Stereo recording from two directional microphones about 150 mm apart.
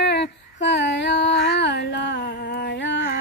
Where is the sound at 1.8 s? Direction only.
90° left.